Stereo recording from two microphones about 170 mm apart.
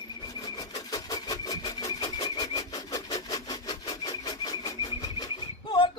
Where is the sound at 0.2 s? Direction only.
25° left (ahead or behind).